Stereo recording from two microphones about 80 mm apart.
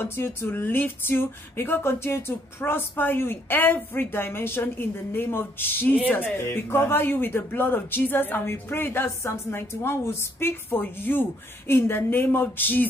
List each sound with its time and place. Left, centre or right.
0.0 s a woman's voice: left